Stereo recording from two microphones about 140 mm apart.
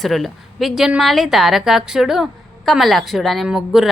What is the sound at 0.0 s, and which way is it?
A woman's voice, centre (ahead or behind).